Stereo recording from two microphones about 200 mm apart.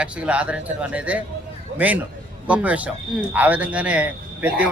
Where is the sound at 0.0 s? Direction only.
5° right (ahead or behind).